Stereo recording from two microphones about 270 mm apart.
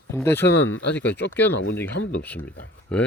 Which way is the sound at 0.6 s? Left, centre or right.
Left.